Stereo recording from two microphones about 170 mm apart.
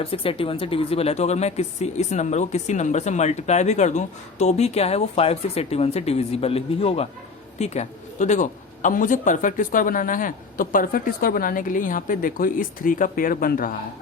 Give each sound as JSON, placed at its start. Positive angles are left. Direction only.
{"t": 0.0, "sound": "speech", "side_deg": 35}